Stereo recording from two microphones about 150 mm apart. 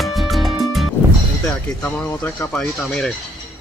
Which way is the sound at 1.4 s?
10° left (ahead or behind).